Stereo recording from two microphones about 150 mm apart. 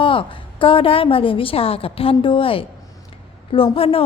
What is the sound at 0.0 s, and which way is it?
A woman's voice, 35° left (ahead or behind).